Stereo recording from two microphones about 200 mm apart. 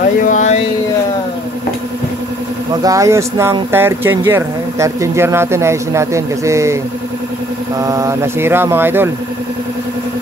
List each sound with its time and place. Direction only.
0.2 s a sound: 40° left (ahead or behind)
2.8 s speech: 15° right (ahead or behind)
7.8 s speech: 15° right (ahead or behind)